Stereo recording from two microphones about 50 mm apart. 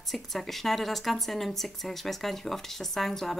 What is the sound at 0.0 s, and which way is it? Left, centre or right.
Speech, centre.